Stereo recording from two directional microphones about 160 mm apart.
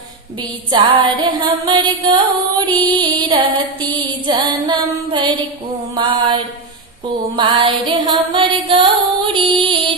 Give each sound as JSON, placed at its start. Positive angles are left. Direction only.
{"t": 0.7, "sound": "music", "side_deg": -30}